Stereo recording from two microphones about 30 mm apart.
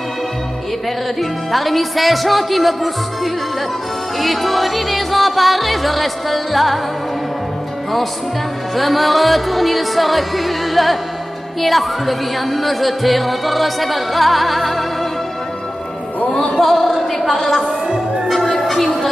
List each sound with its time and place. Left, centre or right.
1.5 s music: centre
4.2 s music: centre
8.7 s music: centre
16.3 s music: centre
16.5 s speech: centre
18.3 s music: centre